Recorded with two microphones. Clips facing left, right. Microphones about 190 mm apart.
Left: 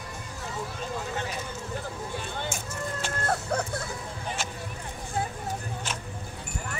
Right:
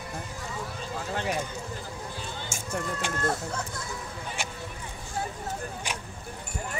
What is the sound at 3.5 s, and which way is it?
Music, 65° left (ahead or behind).